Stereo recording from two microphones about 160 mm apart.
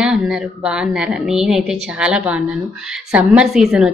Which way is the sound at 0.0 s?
5° right (ahead or behind).